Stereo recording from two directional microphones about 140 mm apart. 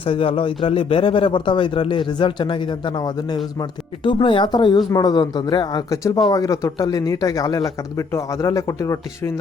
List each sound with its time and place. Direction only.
0.0 s speech: 40° left (ahead or behind); by 9.3 s 20° left (ahead or behind)